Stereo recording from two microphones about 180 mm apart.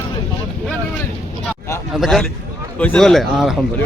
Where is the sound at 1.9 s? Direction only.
Centre (ahead or behind).